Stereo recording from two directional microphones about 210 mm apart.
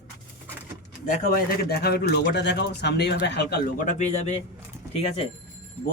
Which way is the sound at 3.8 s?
35° left (ahead or behind).